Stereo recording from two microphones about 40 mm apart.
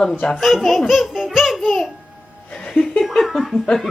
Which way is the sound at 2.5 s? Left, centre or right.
Centre.